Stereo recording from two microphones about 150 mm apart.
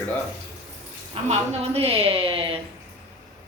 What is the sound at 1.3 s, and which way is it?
A woman's voice, 45° right (ahead or behind).